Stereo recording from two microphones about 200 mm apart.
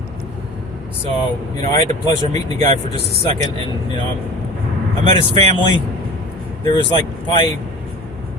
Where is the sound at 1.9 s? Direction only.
20° left (ahead or behind).